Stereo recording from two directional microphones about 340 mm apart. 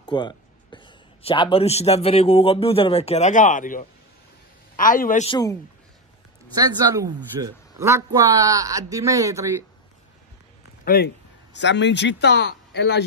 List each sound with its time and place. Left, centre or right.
0.0 s a man's voice: centre
6.5 s a man's voice: centre
10.9 s a man's voice: left